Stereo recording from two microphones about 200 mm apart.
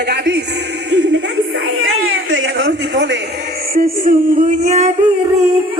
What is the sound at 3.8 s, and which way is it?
Music, 45° right (ahead or behind).